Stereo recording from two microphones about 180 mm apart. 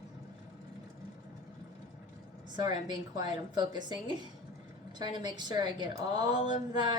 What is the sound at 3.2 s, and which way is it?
Speech, 25° right (ahead or behind).